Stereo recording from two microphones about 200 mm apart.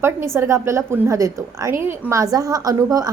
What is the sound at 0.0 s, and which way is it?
A woman's voice, 10° right (ahead or behind).